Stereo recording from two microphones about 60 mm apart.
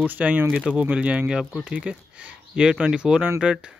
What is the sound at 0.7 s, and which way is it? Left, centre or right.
Speech, centre.